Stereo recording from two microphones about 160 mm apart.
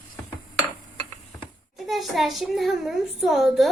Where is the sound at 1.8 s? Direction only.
Centre (ahead or behind).